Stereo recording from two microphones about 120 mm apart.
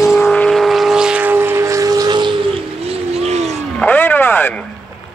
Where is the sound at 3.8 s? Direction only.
15° left (ahead or behind).